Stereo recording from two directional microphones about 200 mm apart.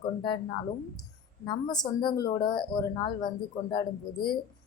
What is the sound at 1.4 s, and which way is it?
Speech, 20° left (ahead or behind).